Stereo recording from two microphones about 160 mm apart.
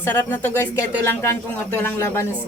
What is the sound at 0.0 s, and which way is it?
A woman's voice, 15° left (ahead or behind).